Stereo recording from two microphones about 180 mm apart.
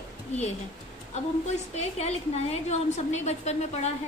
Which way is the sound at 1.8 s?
35° left (ahead or behind).